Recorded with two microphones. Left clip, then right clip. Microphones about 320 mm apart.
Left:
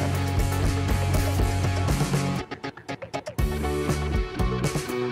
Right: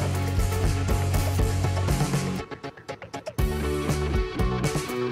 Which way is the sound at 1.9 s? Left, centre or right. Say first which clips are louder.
Even; centre.